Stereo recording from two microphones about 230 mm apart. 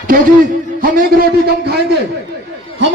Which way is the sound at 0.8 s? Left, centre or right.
Right.